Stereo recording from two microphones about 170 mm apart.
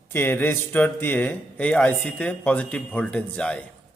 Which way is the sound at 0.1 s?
10° left (ahead or behind).